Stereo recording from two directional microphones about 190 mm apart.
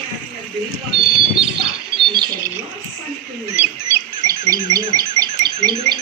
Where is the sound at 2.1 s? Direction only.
20° right (ahead or behind).